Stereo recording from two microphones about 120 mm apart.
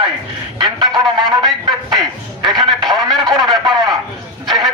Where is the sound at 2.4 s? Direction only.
40° right (ahead or behind).